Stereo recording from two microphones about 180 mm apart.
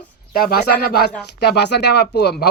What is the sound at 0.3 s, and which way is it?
Speech, 55° left (ahead or behind).